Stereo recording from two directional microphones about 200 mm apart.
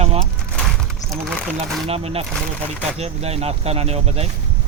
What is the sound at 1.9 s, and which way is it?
Speech, 30° right (ahead or behind).